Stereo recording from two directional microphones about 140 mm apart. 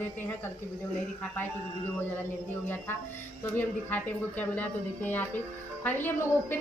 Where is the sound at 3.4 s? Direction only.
15° left (ahead or behind).